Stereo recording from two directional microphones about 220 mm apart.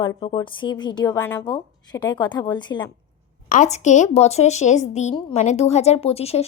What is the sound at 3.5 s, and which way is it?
Speech, 30° left (ahead or behind).